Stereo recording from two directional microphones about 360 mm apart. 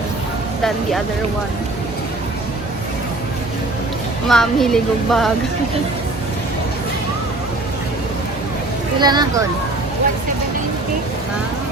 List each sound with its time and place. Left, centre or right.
4.3 s speech: centre
9.0 s speech: centre